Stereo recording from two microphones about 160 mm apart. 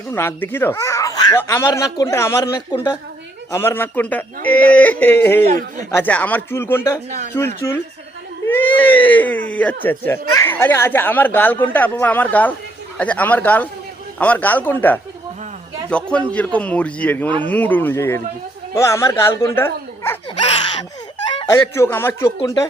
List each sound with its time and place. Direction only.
0.1 s speech: 15° left (ahead or behind)
3.5 s speech: 15° left (ahead or behind)
5.5 s speech: 55° right (ahead or behind)
5.9 s speech: 10° left (ahead or behind)
21.2 s chicken: 30° left (ahead or behind)
21.8 s speech: 15° left (ahead or behind)